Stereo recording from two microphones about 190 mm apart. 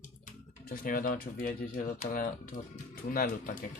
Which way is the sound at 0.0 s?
45° left (ahead or behind).